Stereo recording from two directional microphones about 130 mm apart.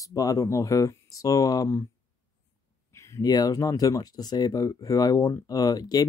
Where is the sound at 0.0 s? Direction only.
25° left (ahead or behind).